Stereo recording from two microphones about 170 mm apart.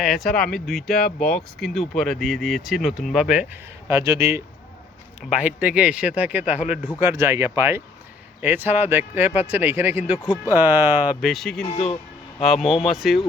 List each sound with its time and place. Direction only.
0.0 s speech: centre (ahead or behind)
3.8 s speech: 15° right (ahead or behind); by 11.6 s centre (ahead or behind)
11.7 s speech: 40° left (ahead or behind)
12.4 s speech: centre (ahead or behind)